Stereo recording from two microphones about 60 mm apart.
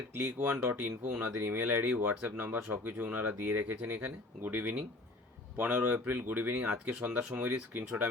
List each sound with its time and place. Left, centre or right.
0.2 s speech: right
0.9 s speech: centre
1.2 s speech: right